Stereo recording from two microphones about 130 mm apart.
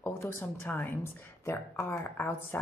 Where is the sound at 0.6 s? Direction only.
15° left (ahead or behind).